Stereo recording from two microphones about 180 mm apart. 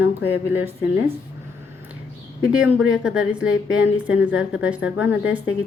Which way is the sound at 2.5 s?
5° right (ahead or behind).